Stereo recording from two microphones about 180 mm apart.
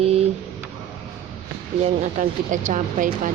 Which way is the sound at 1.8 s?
40° right (ahead or behind).